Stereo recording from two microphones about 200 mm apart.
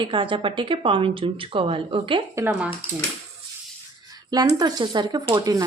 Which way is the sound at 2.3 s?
15° right (ahead or behind).